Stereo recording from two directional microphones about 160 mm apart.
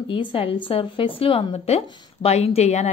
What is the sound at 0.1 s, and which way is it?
A woman's voice, 35° left (ahead or behind).